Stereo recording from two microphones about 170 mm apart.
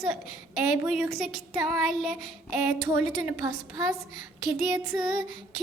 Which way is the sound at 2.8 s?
15° right (ahead or behind).